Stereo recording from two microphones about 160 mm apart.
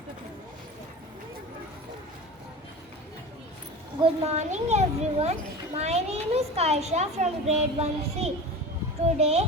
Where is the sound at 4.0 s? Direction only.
40° right (ahead or behind).